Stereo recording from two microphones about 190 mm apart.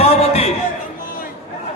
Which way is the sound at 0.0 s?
30° left (ahead or behind).